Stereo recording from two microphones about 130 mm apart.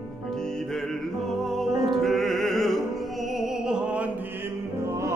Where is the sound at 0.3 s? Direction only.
5° left (ahead or behind).